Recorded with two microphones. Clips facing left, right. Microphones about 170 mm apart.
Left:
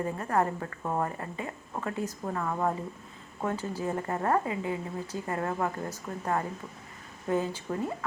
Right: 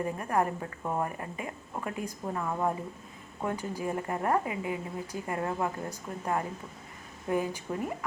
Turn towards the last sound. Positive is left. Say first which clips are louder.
# left 1 dB
turn(degrees=-15)  # may be behind; listen again after turning